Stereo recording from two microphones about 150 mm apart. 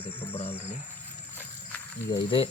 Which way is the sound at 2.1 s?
35° left (ahead or behind).